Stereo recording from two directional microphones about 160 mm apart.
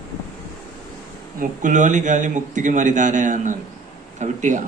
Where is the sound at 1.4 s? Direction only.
50° right (ahead or behind).